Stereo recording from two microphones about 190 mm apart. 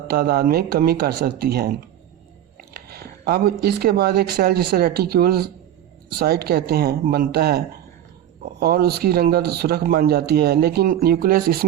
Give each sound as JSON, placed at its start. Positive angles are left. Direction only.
{"t": 0.1, "sound": "speech", "side_deg": -55}